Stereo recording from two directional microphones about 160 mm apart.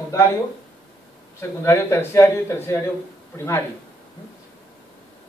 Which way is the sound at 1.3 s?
15° left (ahead or behind).